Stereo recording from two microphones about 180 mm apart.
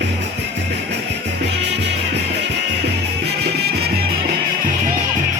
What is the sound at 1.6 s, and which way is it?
Music, 70° right (ahead or behind).